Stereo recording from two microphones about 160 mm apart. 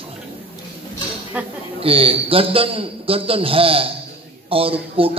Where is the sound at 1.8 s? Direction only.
35° right (ahead or behind).